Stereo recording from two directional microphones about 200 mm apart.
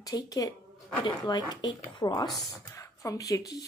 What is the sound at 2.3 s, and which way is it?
Speech, centre (ahead or behind).